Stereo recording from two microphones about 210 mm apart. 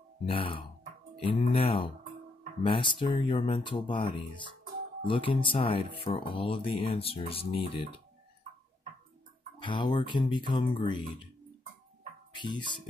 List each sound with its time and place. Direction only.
0.2 s speech: 25° left (ahead or behind)
9.6 s speech: 20° left (ahead or behind)
12.4 s speech: 20° left (ahead or behind)